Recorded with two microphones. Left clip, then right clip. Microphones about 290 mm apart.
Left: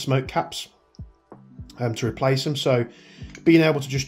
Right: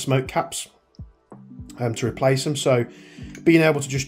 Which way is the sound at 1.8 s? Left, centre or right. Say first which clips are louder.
Right 2 dB; centre.